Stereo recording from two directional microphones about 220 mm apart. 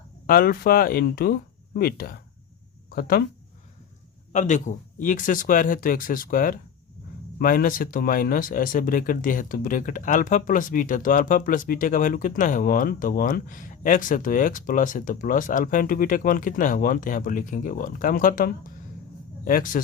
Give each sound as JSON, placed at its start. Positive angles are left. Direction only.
{"t": 0.3, "sound": "speech", "side_deg": 40}
{"t": 4.3, "sound": "speech", "side_deg": 35}